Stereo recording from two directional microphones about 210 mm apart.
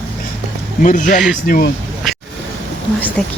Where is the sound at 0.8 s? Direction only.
35° left (ahead or behind).